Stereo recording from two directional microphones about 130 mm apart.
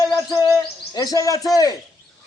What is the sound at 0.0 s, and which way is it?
Bird, 25° left (ahead or behind).